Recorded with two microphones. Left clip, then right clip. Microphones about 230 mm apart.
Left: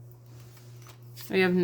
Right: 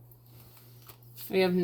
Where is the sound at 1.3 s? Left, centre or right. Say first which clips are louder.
Left 2 dB; left.